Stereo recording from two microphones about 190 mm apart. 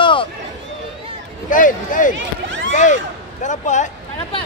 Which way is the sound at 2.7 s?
40° left (ahead or behind).